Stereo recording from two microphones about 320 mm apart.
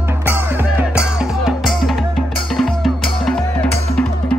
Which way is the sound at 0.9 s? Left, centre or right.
Centre.